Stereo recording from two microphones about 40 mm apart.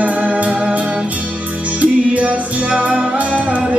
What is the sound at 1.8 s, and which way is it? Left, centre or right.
Music, right.